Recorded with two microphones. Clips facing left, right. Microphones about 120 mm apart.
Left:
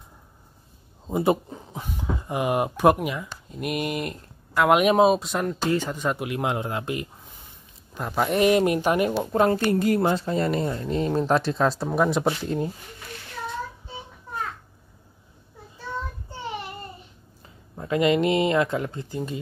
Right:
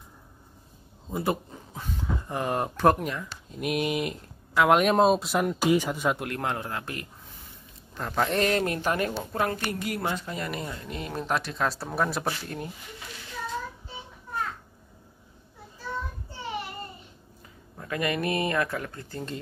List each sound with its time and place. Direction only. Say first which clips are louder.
1.0 s speech: left 6 dB; 20° left (ahead or behind)
11.8 s speech: left 6 dB; 15° left (ahead or behind)
17.7 s speech: left 8 dB; 20° left (ahead or behind)